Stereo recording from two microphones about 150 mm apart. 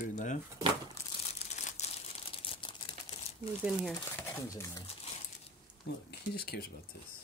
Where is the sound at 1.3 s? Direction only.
50° left (ahead or behind).